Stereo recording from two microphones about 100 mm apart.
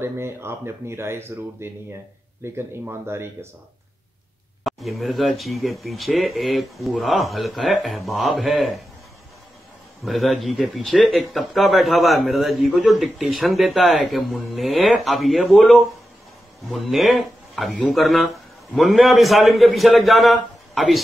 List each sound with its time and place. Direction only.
0.0 s speech: 25° right (ahead or behind)
4.6 s speech: centre (ahead or behind)
10.0 s speech: centre (ahead or behind)